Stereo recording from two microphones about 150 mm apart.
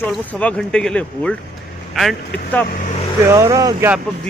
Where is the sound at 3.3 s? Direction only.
20° right (ahead or behind).